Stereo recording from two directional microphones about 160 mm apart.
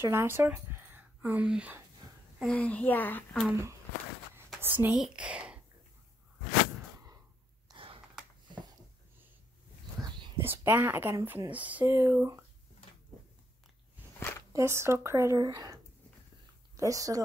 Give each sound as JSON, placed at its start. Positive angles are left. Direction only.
{"t": 0.0, "sound": "speech", "side_deg": -15}
{"t": 2.5, "sound": "speech", "side_deg": 10}
{"t": 4.6, "sound": "speech", "side_deg": -10}
{"t": 7.6, "sound": "sigh", "side_deg": -35}
{"t": 10.4, "sound": "speech", "side_deg": -15}
{"t": 14.5, "sound": "speech", "side_deg": -15}